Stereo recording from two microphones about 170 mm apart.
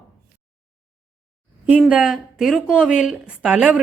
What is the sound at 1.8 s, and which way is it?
A woman's voice, 5° right (ahead or behind).